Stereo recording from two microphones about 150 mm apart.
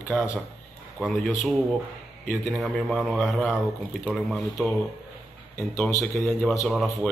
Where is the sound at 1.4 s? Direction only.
Centre (ahead or behind).